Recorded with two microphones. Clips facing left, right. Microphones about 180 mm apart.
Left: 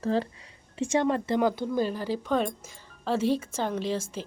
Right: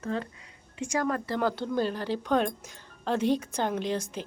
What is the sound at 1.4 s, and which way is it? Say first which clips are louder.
Speech: left 2 dB; 10° left (ahead or behind).